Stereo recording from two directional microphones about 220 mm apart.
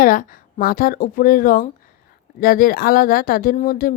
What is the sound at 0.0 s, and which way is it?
Speech, 40° left (ahead or behind).